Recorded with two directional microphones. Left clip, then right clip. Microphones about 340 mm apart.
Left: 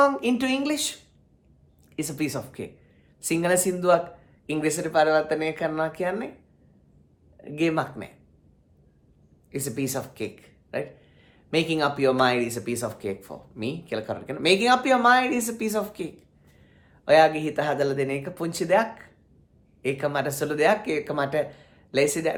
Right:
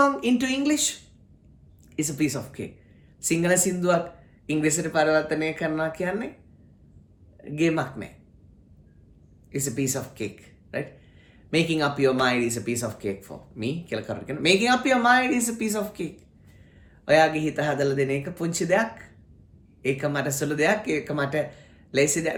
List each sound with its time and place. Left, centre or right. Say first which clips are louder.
0.0 s speech: even; centre
2.0 s speech: right 2 dB; centre
7.4 s speech: even; centre
9.5 s speech: right 1 dB; centre